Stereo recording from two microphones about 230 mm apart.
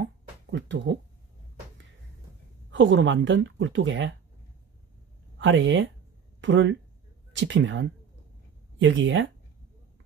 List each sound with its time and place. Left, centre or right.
0.0 s beatboxing: right
2.7 s speech: right
5.4 s speech: right